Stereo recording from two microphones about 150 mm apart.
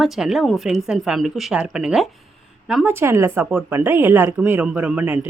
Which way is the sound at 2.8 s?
15° right (ahead or behind).